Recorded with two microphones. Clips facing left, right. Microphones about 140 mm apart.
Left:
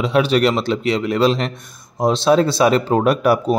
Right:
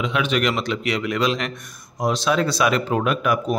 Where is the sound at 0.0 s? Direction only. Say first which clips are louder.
Left 6 dB; 35° left (ahead or behind).